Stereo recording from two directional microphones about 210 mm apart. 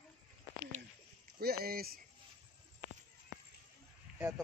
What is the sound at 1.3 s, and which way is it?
Speech, 45° right (ahead or behind).